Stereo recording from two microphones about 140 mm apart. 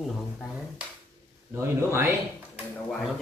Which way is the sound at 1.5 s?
20° right (ahead or behind).